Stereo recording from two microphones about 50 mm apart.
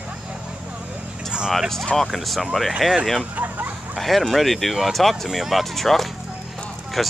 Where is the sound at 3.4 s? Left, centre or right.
Right.